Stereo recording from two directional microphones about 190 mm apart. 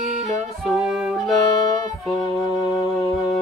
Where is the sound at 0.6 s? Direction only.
Centre (ahead or behind).